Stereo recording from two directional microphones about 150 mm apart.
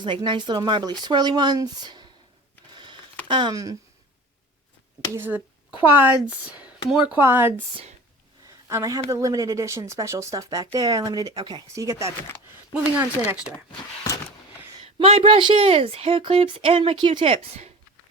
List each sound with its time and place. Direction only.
0.0 s speech: 30° right (ahead or behind)
2.7 s a sound: 30° right (ahead or behind)
3.2 s speech: 30° right (ahead or behind)
5.1 s speech: 15° right (ahead or behind)
7.2 s speech: 15° right (ahead or behind)
8.7 s speech: 20° right (ahead or behind)
14.9 s speech: 40° right (ahead or behind)